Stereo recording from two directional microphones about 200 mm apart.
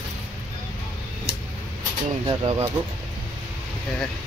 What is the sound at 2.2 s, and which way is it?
Speech, 20° right (ahead or behind).